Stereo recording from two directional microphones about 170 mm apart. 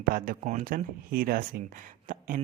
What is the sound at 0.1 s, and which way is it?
Speech, 55° right (ahead or behind).